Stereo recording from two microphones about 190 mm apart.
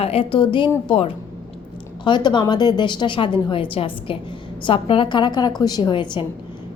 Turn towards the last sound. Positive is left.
turn(degrees=25)  # may be behind; listen again after turning